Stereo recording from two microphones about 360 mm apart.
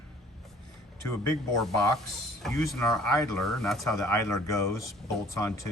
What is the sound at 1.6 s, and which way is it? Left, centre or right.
Speech, centre.